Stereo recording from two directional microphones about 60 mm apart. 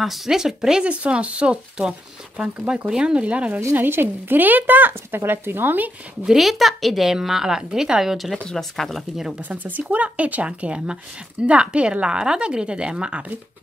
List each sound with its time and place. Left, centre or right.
0.0 s speech: centre; by 3.6 s right
3.7 s speech: right
6.2 s a woman's voice: centre
9.5 s speech: right